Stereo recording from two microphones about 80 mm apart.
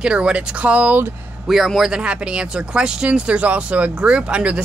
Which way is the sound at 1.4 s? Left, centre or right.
Centre.